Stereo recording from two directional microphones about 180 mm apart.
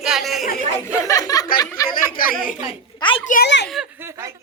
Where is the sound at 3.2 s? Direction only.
50° left (ahead or behind).